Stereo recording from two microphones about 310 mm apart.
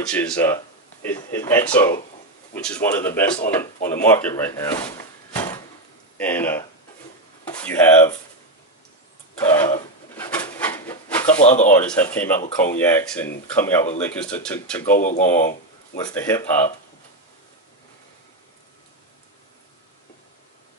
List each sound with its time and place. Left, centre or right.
0.0 s speech: centre
6.1 s speech: centre
9.4 s speech: centre
10.1 s a sound: centre
11.4 s speech: left
11.7 s speech: centre
15.0 s speech: left
16.0 s speech: centre